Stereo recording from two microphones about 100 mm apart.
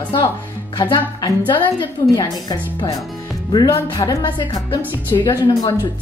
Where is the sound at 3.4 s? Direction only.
55° left (ahead or behind).